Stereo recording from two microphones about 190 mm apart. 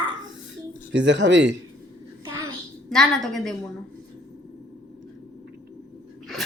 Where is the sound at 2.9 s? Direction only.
Centre (ahead or behind).